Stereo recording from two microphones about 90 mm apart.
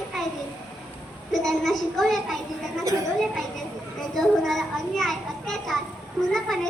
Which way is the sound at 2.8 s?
35° right (ahead or behind).